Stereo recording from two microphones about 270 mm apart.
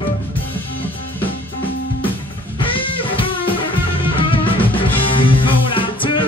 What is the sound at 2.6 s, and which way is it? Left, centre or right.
Music, centre.